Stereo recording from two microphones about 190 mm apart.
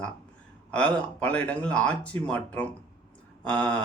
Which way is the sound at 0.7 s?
5° left (ahead or behind).